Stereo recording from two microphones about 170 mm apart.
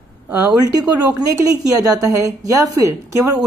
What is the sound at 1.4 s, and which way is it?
A woman's voice, 20° right (ahead or behind).